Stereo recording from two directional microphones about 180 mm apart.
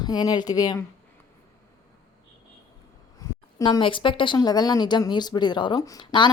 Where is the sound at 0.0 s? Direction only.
20° left (ahead or behind).